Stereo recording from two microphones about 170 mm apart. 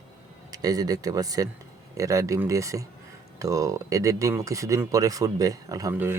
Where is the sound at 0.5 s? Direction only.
20° right (ahead or behind).